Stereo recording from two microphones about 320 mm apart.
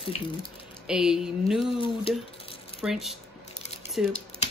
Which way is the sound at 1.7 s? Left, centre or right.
Centre.